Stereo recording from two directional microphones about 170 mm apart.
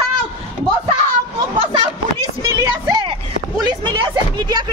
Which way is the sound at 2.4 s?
20° right (ahead or behind).